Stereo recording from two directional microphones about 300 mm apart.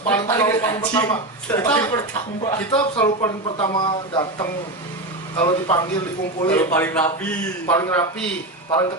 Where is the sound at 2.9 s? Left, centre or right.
Centre.